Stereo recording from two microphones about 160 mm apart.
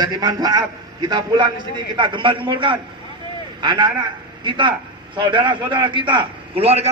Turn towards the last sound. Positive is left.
turn(degrees=-40)  # may be behind; listen again after turning